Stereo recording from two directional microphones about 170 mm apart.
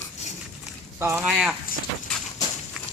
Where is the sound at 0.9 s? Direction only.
10° right (ahead or behind).